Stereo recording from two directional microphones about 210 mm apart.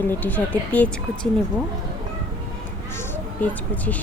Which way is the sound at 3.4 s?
5° left (ahead or behind).